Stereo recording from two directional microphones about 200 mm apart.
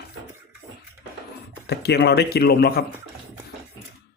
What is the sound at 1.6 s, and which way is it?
Speech, 55° left (ahead or behind).